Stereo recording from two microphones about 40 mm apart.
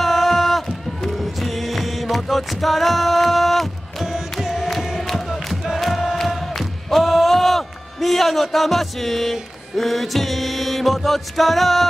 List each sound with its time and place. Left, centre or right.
0.0 s run: centre
1.1 s music: centre
4.0 s music: centre
5.0 s crowd: centre
5.8 s a sound: centre